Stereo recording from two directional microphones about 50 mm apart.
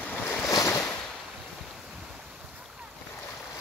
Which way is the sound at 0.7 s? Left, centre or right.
Left.